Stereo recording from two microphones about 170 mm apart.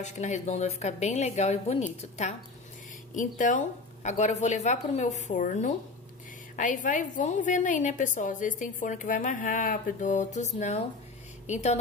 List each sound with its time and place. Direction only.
0.0 s a woman's voice: 45° left (ahead or behind)
3.2 s a woman's voice: 50° left (ahead or behind)